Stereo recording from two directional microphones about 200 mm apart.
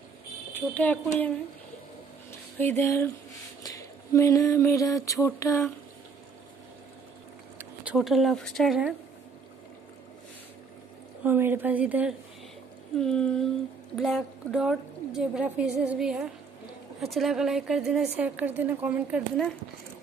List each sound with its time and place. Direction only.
0.5 s speech: 10° left (ahead or behind)
2.6 s speech: 10° left (ahead or behind)
3.6 s a sound: 15° left (ahead or behind)
7.5 s speech: 5° right (ahead or behind)
11.2 s a woman's voice: 10° right (ahead or behind)